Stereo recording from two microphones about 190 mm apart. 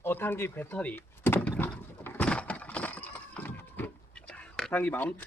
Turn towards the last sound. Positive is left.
turn(degrees=10)  # may be behind; listen again after turning